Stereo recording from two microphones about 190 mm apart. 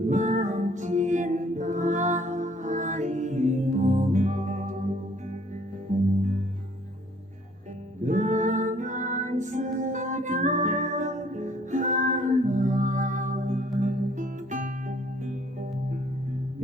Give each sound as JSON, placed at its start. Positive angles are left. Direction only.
{"t": 0.1, "sound": "music", "side_deg": -40}
{"t": 8.0, "sound": "music", "side_deg": -40}